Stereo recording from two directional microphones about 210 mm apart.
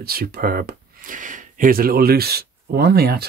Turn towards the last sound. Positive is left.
turn(degrees=-50)  # may be behind; listen again after turning